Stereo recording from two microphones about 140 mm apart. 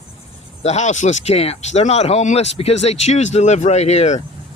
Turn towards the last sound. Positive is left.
turn(degrees=50)  # may be behind; listen again after turning